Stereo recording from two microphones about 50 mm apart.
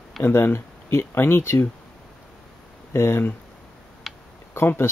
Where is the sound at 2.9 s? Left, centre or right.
Left.